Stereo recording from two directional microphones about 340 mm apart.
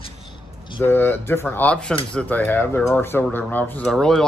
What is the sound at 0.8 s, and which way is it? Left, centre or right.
Speech, centre.